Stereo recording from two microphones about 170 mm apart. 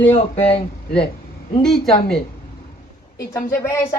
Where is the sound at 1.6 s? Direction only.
5° left (ahead or behind).